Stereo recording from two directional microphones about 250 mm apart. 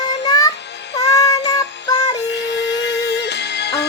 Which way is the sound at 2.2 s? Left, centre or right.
Left.